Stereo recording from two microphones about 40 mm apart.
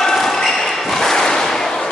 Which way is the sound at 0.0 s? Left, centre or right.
Centre.